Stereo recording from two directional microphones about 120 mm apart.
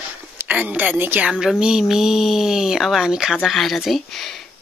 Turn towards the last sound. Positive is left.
turn(degrees=0)  # may be behind; listen again after turning